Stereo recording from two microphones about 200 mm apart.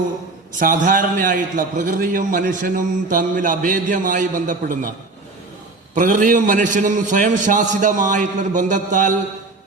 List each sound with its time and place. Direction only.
0.6 s a man's voice: 45° right (ahead or behind)
5.9 s a man's voice: 40° right (ahead or behind)